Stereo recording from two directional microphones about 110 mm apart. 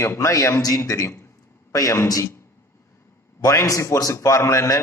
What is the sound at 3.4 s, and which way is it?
A man's voice, 30° left (ahead or behind).